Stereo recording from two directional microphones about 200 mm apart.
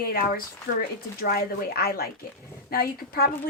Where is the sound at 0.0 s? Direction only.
50° left (ahead or behind).